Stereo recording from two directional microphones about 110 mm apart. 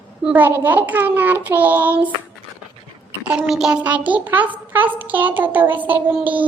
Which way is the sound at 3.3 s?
5° right (ahead or behind).